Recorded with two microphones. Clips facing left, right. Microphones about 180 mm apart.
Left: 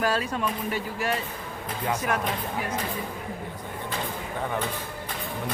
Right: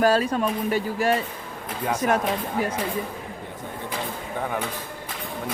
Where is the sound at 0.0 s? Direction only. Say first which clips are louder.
Right 6 dB; 40° right (ahead or behind).